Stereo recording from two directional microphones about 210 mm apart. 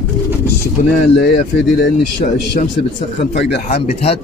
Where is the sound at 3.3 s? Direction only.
55° left (ahead or behind).